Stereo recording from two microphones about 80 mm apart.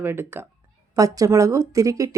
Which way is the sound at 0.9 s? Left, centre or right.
Right.